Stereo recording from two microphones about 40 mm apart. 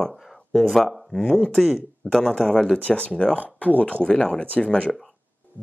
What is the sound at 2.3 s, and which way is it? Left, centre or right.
Speech, left.